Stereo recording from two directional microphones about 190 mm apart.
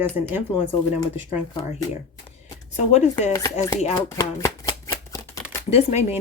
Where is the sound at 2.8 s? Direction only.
35° left (ahead or behind).